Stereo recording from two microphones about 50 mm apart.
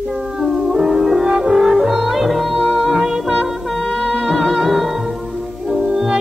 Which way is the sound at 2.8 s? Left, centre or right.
Centre.